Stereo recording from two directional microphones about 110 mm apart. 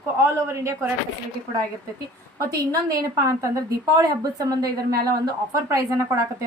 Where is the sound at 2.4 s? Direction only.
35° right (ahead or behind).